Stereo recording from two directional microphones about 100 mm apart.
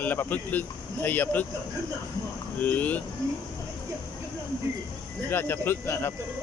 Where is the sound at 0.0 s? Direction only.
20° left (ahead or behind).